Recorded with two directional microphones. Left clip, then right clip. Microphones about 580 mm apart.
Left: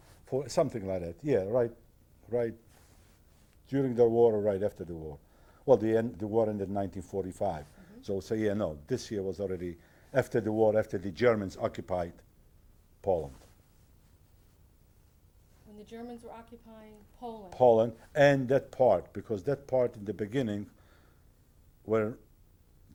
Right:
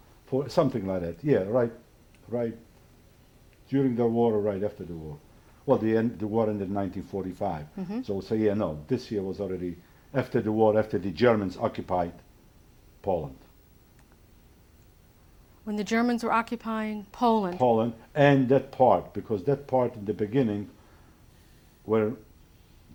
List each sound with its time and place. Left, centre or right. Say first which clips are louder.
0.3 s speech: right 4 dB; centre
3.7 s speech: even; left
15.8 s speech: right 18 dB; right
17.5 s speech: left 1 dB; left
21.8 s speech: right 4 dB; centre